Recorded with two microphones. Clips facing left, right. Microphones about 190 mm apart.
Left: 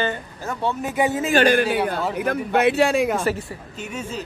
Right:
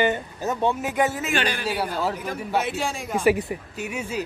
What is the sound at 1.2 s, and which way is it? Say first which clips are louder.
Speech: left 7 dB; 35° left (ahead or behind).